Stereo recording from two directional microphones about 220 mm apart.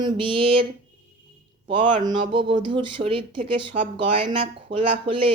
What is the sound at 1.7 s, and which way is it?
Speech, 20° right (ahead or behind).